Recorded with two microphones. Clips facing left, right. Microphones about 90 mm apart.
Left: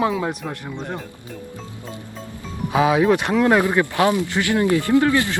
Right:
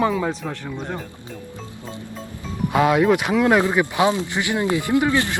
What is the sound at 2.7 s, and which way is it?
Speech, centre (ahead or behind).